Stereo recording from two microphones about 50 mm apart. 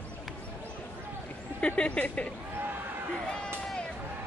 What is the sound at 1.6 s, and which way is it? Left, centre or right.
Speech, left.